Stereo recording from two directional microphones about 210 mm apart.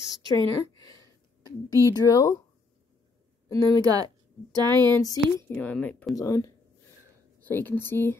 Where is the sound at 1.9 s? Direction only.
15° left (ahead or behind).